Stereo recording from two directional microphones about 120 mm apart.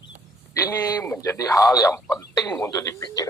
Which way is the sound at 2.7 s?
30° left (ahead or behind).